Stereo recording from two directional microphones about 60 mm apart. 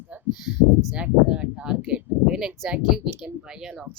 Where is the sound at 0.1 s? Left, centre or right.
Right.